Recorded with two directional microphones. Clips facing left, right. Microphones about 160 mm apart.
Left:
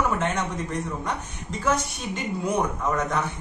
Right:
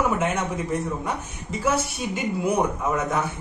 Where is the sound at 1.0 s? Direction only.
5° right (ahead or behind).